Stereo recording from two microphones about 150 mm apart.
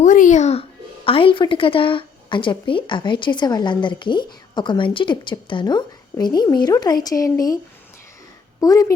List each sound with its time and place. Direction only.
0.0 s speech: 60° left (ahead or behind)
1.0 s a woman's voice: 35° left (ahead or behind)
8.6 s a woman's voice: 25° left (ahead or behind)